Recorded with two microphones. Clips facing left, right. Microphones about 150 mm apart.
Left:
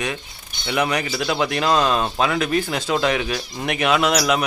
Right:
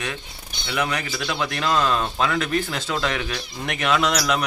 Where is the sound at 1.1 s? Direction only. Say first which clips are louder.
Left 5 dB; 30° left (ahead or behind).